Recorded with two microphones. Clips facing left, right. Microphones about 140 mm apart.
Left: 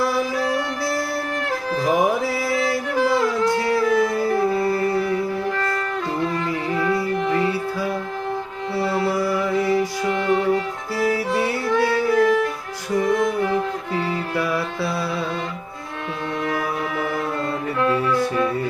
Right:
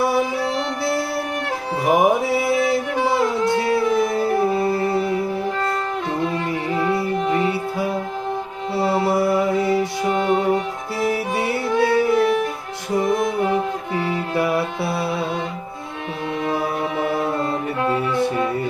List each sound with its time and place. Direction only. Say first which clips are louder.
0.0 s music: right 2 dB; 25° right (ahead or behind)
16.4 s music: right 3 dB; 25° right (ahead or behind)